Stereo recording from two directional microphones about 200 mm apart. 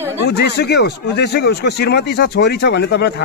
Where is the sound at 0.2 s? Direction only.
55° left (ahead or behind).